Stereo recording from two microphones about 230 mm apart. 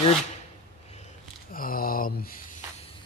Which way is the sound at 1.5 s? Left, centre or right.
Left.